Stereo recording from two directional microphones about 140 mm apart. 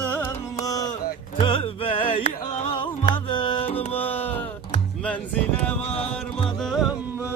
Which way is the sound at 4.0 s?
15° left (ahead or behind).